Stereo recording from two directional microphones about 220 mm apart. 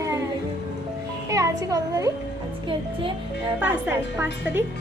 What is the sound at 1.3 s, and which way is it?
Speech, 15° right (ahead or behind).